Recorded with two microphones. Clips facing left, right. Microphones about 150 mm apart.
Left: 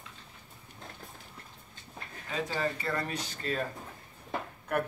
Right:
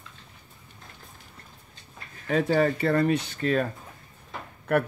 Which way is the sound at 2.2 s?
60° right (ahead or behind).